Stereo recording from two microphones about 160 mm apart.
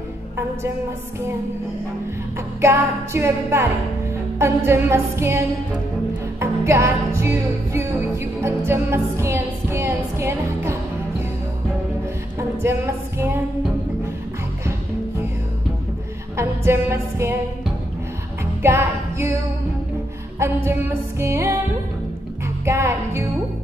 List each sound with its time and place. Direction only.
2.6 s music: 15° right (ahead or behind)
4.6 s music: 15° right (ahead or behind)
6.4 s music: 15° right (ahead or behind)
12.4 s music: 15° right (ahead or behind)
16.3 s music: 15° right (ahead or behind)
18.4 s music: 15° right (ahead or behind)
20.3 s music: 15° right (ahead or behind)
22.7 s music: 15° right (ahead or behind)